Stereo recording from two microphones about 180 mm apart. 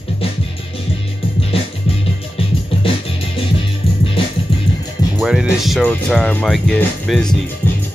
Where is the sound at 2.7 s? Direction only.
30° left (ahead or behind).